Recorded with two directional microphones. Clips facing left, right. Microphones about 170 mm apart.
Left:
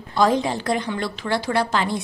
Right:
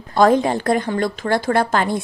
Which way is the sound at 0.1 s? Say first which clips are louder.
Right 5 dB; 50° right (ahead or behind).